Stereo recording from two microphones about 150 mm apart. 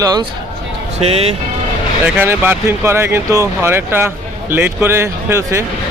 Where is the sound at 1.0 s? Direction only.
40° right (ahead or behind).